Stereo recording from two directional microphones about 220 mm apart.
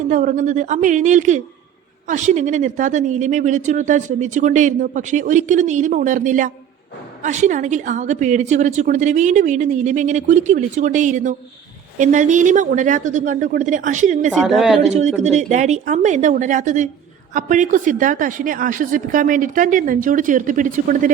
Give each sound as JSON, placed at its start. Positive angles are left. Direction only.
{"t": 0.1, "sound": "speech", "side_deg": -35}
{"t": 14.3, "sound": "a woman's voice", "side_deg": 0}
{"t": 14.8, "sound": "speech", "side_deg": -30}